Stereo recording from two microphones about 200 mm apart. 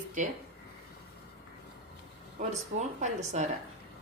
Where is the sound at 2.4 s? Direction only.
40° right (ahead or behind).